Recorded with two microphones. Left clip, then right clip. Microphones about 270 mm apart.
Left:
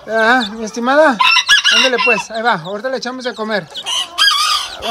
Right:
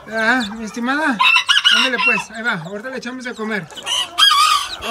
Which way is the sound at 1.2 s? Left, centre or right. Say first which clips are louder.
Left 2 dB; left.